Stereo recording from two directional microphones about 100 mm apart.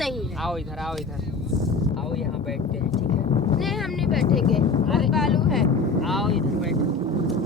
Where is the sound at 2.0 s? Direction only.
Centre (ahead or behind).